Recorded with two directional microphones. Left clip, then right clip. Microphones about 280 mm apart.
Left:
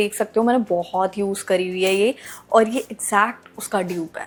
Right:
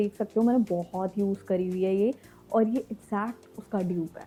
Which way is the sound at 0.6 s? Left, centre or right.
Left.